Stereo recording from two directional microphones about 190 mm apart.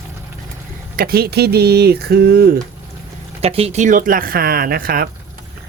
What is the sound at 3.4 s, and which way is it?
Speech, 30° right (ahead or behind).